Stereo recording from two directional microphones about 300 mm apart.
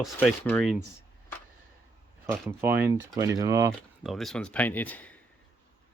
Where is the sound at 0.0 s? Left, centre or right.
Centre.